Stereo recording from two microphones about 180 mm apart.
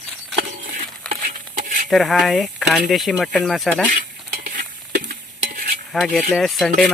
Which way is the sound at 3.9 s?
50° right (ahead or behind).